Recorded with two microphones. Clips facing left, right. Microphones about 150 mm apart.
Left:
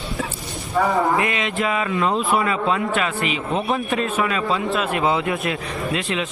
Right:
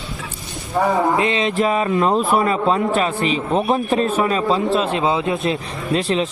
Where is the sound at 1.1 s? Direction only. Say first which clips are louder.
Right 4 dB; 25° right (ahead or behind).